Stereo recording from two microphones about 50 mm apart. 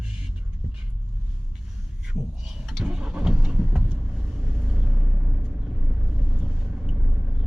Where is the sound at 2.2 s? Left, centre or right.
Centre.